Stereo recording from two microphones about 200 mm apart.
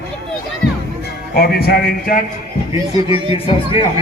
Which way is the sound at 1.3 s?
50° left (ahead or behind).